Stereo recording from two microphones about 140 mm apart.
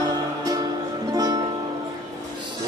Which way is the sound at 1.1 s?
25° right (ahead or behind).